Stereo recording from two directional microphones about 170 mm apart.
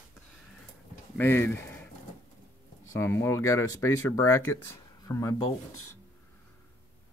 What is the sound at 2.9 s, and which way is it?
Speech, 15° left (ahead or behind).